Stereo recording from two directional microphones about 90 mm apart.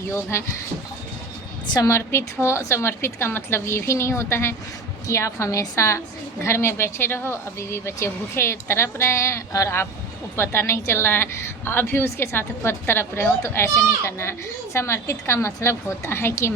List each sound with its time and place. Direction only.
0.1 s a woman's voice: 30° left (ahead or behind)
1.6 s a woman's voice: 45° left (ahead or behind)
1.9 s a woman's voice: 30° left (ahead or behind)